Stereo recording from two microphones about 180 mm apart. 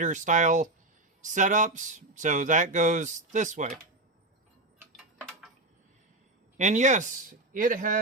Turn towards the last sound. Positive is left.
turn(degrees=-45)  # may be behind; listen again after turning